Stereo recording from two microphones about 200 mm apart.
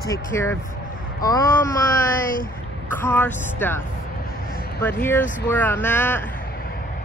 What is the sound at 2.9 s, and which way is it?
Speech, 10° left (ahead or behind).